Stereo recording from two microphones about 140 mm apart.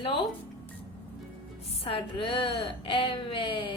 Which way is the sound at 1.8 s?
40° left (ahead or behind).